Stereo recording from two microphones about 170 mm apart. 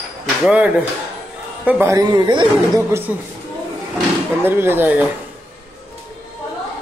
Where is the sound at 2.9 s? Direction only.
15° right (ahead or behind).